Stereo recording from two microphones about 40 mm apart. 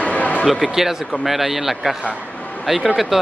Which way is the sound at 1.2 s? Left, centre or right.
Centre.